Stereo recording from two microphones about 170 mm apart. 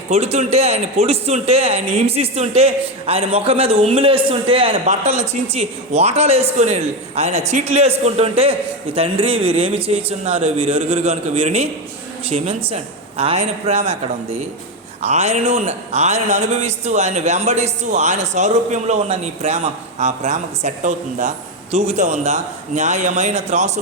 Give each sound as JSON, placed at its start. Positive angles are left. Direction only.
{"t": 0.1, "sound": "a man's voice", "side_deg": -40}
{"t": 15.0, "sound": "speech", "side_deg": -40}